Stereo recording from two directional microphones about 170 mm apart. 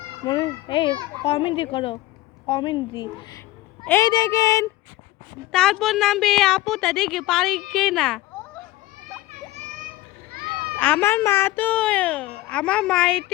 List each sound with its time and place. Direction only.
0.3 s speech: 30° left (ahead or behind)
5.5 s a woman's voice: 5° left (ahead or behind)
10.3 s children playing: 60° right (ahead or behind)
10.8 s a child's voice: 10° left (ahead or behind)